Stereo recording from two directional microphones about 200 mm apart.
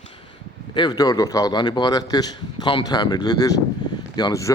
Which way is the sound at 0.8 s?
20° left (ahead or behind).